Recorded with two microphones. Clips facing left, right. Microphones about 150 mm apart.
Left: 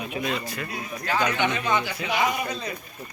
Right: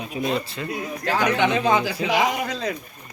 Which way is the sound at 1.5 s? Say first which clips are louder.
Right 5 dB; 90° right.